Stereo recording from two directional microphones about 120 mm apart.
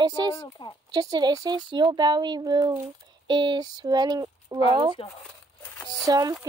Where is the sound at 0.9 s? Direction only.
35° right (ahead or behind).